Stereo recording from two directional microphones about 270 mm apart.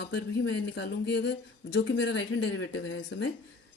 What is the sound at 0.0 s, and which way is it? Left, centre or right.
A woman's voice, left.